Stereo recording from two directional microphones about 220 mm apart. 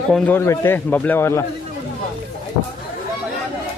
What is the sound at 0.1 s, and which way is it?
A man's voice, 10° left (ahead or behind).